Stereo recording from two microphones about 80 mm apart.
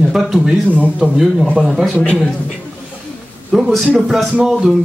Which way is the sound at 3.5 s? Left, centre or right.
Centre.